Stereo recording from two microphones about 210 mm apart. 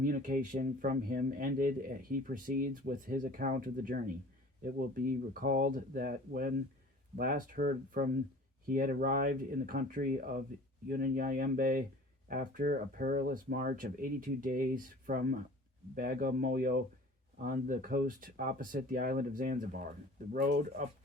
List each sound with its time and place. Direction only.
0.0 s speech: 40° right (ahead or behind)